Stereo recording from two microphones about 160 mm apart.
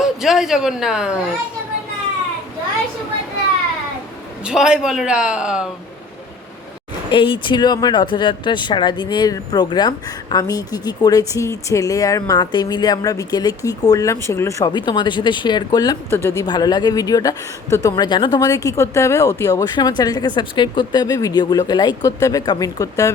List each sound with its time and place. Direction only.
0.0 s speech: 5° right (ahead or behind)
4.4 s speech: 5° right (ahead or behind)
7.1 s speech: 30° left (ahead or behind)